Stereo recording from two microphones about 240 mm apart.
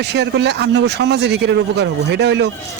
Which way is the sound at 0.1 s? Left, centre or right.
Right.